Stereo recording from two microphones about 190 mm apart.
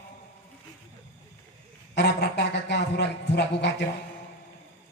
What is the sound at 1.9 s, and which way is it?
A man's voice, 65° left (ahead or behind).